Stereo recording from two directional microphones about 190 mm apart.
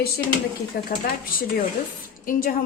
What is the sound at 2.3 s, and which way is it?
Speech, 45° left (ahead or behind).